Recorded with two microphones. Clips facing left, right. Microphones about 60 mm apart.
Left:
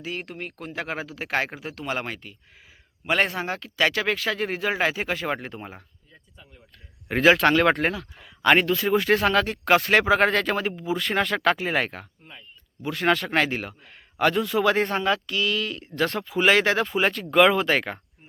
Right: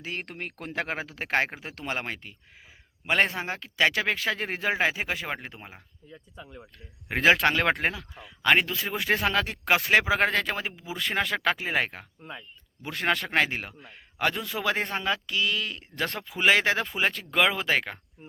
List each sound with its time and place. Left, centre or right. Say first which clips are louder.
0.0 s speech: left 2 dB; right
4.9 s speech: left 3 dB; centre
6.3 s speech: right 8 dB; right
7.1 s speech: left 4 dB; right
12.8 s speech: left 5 dB; right
13.9 s a man's voice: left 6 dB; centre
15.3 s speech: left 3 dB; centre